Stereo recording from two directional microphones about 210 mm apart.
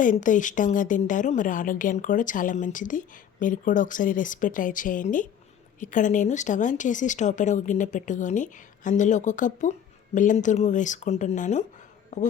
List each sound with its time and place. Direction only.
0.0 s a woman's voice: 40° left (ahead or behind)